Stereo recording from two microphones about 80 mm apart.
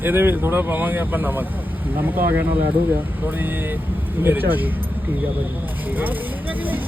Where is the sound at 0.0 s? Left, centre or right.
Right.